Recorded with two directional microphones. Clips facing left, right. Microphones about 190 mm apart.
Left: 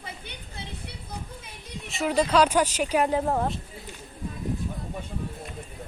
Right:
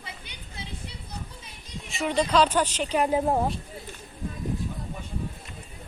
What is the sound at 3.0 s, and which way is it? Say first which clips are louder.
Speech: right 1 dB; 10° right (ahead or behind).